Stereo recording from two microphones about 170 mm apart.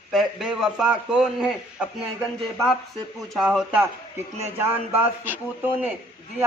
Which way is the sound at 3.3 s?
Centre (ahead or behind).